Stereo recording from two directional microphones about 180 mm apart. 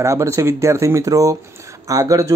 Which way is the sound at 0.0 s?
15° right (ahead or behind).